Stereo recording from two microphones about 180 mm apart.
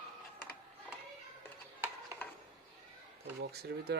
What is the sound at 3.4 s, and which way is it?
Speech, 60° right (ahead or behind).